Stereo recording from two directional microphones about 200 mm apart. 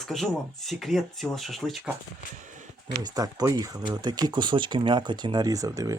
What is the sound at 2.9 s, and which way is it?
Speech, 15° right (ahead or behind).